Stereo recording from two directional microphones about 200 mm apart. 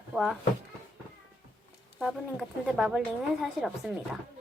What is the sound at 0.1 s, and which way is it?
Speech, centre (ahead or behind).